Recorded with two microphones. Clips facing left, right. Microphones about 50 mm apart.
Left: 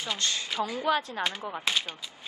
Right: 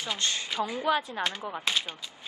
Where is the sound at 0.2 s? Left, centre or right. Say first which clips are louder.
Right 1 dB; right.